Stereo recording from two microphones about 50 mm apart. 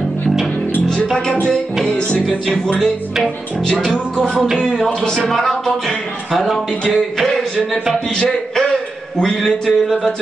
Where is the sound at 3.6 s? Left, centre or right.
Centre.